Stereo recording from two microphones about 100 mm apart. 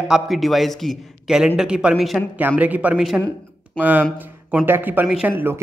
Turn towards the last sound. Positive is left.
turn(degrees=-20)  # may be behind; listen again after turning